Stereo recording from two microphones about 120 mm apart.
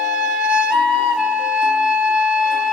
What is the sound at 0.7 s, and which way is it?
Music, centre (ahead or behind).